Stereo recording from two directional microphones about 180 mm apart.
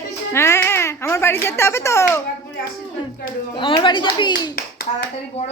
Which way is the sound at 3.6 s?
25° left (ahead or behind).